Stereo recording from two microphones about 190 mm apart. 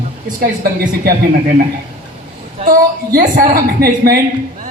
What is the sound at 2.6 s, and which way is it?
A woman's voice, 45° right (ahead or behind).